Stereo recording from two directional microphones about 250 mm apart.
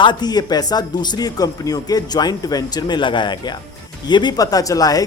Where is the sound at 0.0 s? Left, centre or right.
Centre.